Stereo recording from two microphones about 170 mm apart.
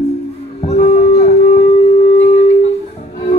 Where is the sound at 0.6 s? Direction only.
40° left (ahead or behind).